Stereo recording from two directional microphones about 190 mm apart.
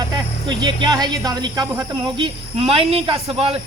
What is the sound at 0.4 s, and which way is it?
Speech, 25° right (ahead or behind).